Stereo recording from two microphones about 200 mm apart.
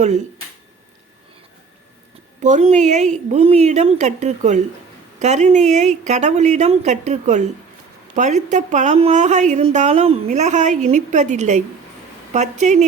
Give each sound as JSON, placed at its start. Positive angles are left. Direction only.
{"t": 2.4, "sound": "a woman's voice", "side_deg": -35}